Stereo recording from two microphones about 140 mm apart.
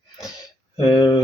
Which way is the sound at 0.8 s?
30° left (ahead or behind).